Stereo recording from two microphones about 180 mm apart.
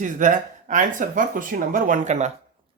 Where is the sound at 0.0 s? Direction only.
45° right (ahead or behind).